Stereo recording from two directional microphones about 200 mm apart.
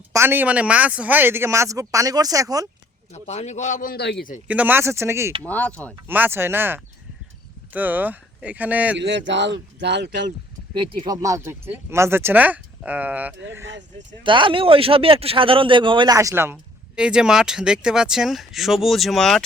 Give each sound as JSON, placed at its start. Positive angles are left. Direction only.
{"t": 0.1, "sound": "speech", "side_deg": -10}
{"t": 3.1, "sound": "a man's voice", "side_deg": 35}
{"t": 4.4, "sound": "speech", "side_deg": -10}
{"t": 5.4, "sound": "speech", "side_deg": 5}
{"t": 6.1, "sound": "speech", "side_deg": -10}
{"t": 9.0, "sound": "speech", "side_deg": -60}
{"t": 10.8, "sound": "speech", "side_deg": -20}
{"t": 14.3, "sound": "speech", "side_deg": -25}